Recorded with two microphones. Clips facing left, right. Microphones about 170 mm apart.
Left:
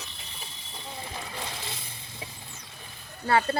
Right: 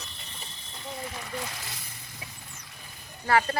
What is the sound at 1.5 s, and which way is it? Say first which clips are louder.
Frying: left 3 dB; 25° left (ahead or behind).